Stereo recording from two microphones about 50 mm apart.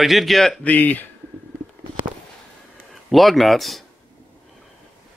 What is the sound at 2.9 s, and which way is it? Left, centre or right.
Speech, centre.